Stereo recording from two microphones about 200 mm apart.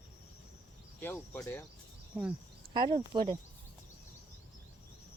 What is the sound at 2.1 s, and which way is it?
Speech, centre (ahead or behind).